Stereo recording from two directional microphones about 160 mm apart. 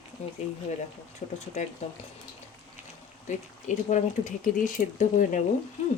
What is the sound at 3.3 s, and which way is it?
Speech, 50° left (ahead or behind).